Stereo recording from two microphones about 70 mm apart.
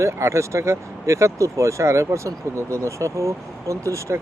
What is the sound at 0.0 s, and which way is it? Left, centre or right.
Speech, right.